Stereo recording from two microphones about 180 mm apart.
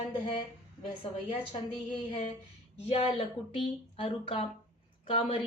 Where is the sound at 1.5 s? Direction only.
30° left (ahead or behind).